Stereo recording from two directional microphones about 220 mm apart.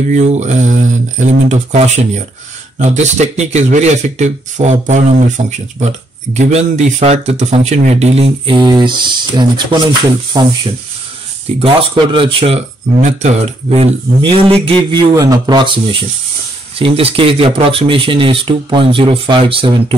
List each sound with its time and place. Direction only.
0.1 s speech: 30° right (ahead or behind)
11.6 s speech: 25° right (ahead or behind)